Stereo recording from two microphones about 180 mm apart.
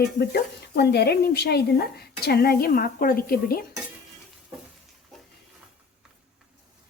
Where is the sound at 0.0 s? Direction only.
65° left (ahead or behind).